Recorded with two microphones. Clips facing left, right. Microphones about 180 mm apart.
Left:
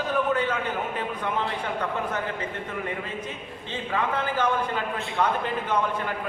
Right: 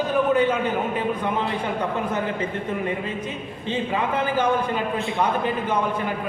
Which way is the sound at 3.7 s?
15° right (ahead or behind).